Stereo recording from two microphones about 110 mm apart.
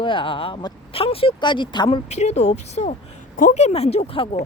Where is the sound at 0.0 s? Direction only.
50° left (ahead or behind).